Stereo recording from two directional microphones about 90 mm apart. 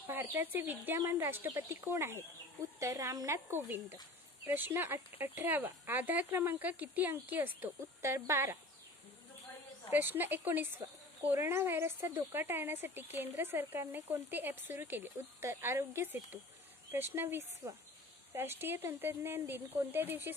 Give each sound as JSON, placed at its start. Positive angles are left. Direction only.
{"t": 0.0, "sound": "speech", "side_deg": -25}
{"t": 3.3, "sound": "speech", "side_deg": -20}
{"t": 9.8, "sound": "speech", "side_deg": -20}